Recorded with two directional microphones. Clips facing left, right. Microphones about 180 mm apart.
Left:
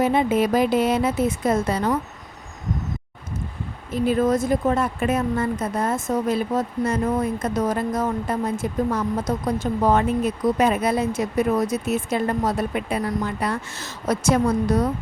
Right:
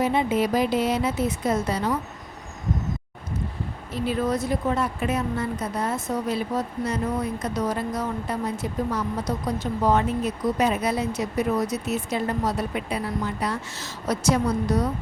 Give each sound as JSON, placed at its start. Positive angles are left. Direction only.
{"t": 0.0, "sound": "speech", "side_deg": 50}
{"t": 4.0, "sound": "speech", "side_deg": 50}